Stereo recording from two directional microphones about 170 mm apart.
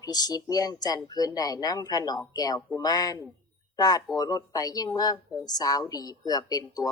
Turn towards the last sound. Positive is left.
turn(degrees=20)  # may be behind; listen again after turning